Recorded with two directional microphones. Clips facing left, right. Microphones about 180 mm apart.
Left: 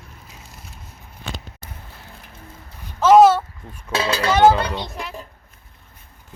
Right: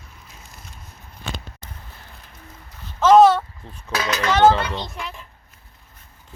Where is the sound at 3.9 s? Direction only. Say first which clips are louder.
Left 2 dB; 30° left (ahead or behind).